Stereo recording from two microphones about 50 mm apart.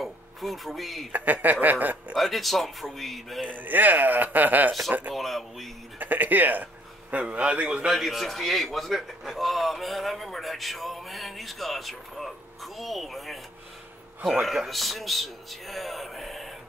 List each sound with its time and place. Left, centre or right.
0.0 s a sound: centre
1.1 s a man's voice: right
2.1 s a man's voice: centre
3.4 s a man's voice: right
5.1 s a man's voice: centre
5.9 s a man's voice: right
7.9 s a man's voice: centre
14.4 s a man's voice: centre